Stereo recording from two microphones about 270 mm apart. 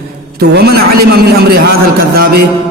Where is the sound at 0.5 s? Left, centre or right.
Right.